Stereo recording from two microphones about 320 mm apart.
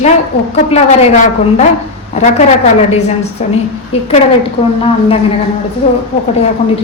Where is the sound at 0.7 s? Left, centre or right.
Left.